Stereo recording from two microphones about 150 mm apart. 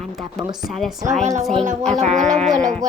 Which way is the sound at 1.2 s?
50° right (ahead or behind).